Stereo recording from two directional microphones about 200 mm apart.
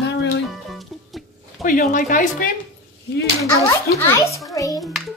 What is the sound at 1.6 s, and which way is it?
Speech, 40° left (ahead or behind).